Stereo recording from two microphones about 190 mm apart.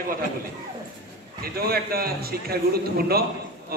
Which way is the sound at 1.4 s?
55° right (ahead or behind).